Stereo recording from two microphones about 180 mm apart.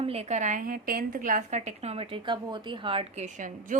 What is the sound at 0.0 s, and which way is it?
A woman's voice, 35° right (ahead or behind).